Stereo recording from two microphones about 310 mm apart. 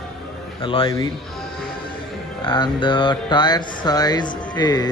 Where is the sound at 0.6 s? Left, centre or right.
Centre.